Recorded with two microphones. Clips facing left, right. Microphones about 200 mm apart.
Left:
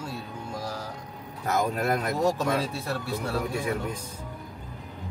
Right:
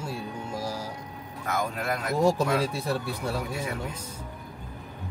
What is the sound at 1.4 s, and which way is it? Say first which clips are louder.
Speech: left 4 dB; 40° left (ahead or behind).